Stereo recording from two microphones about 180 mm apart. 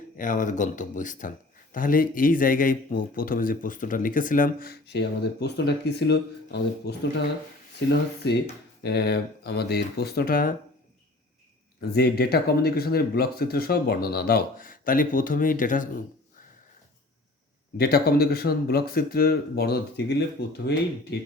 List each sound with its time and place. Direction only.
0.2 s speech: 45° left (ahead or behind)
11.9 s speech: 60° left (ahead or behind)
17.7 s speech: 60° left (ahead or behind)